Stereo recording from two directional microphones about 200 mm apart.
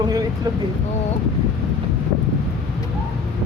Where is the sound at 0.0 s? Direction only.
20° right (ahead or behind).